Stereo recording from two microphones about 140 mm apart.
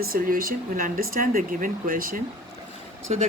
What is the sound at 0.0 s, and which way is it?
Speech, 90° right.